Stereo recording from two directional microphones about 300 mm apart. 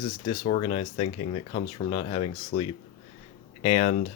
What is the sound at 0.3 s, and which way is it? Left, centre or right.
Speech, centre.